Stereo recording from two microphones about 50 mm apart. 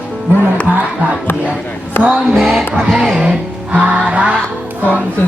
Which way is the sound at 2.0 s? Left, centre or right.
Right.